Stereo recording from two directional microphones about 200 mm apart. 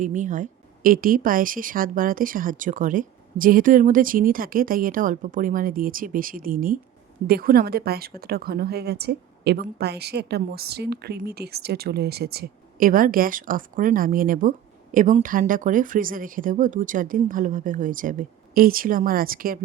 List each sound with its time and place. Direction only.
0.0 s a woman's voice: 40° right (ahead or behind)